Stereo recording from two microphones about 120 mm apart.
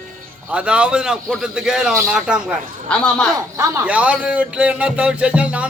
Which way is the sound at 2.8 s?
5° left (ahead or behind).